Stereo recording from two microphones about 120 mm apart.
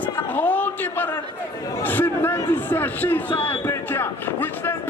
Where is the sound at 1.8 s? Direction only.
15° left (ahead or behind).